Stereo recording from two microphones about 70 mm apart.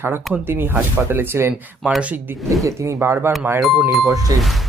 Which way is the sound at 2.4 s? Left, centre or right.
Right.